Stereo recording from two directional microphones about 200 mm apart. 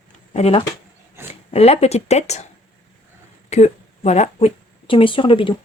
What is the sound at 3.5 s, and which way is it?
Speech, 35° left (ahead or behind).